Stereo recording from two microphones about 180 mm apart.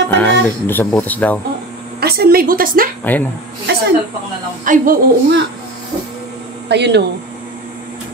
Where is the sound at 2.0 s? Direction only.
60° right (ahead or behind).